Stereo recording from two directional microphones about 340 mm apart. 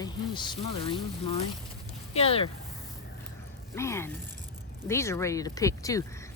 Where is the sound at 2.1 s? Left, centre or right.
Centre.